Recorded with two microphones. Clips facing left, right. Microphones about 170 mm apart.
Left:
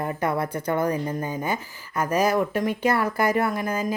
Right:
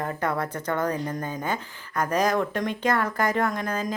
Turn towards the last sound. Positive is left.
turn(degrees=10)  # may be behind; listen again after turning